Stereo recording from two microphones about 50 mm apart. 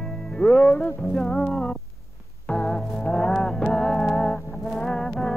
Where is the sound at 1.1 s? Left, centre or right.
Centre.